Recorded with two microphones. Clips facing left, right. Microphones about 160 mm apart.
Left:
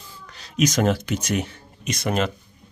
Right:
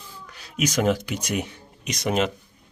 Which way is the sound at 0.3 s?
5° right (ahead or behind).